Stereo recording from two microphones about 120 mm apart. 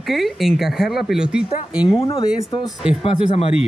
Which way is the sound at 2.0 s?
50° left (ahead or behind).